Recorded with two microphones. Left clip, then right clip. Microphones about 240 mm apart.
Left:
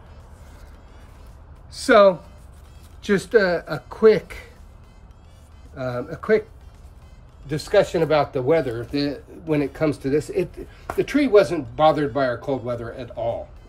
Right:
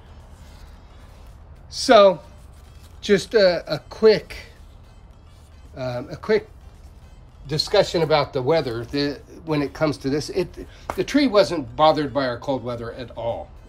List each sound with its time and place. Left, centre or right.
1.7 s speech: centre
5.8 s speech: centre
7.4 s speech: centre